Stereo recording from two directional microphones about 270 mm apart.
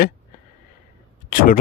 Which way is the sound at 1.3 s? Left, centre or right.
Left.